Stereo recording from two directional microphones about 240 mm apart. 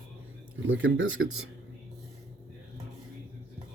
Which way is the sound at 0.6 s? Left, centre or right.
Right.